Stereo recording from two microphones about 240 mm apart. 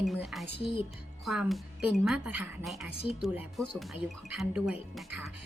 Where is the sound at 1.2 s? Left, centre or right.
Centre.